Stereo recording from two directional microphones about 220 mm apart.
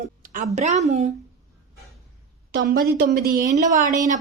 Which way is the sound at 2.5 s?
45° right (ahead or behind).